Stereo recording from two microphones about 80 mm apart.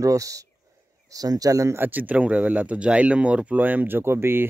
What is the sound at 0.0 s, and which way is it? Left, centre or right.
Speech, right.